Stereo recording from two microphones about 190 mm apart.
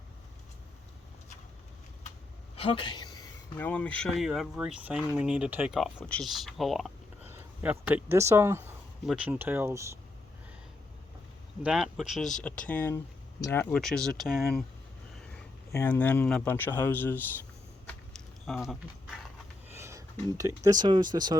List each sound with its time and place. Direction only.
2.6 s a sound: 25° left (ahead or behind)
3.6 s speech: 5° left (ahead or behind); by 10.0 s 15° right (ahead or behind)
11.6 s speech: 5° right (ahead or behind)
15.7 s speech: 10° left (ahead or behind)
18.4 s speech: centre (ahead or behind)
19.7 s speech: 15° right (ahead or behind)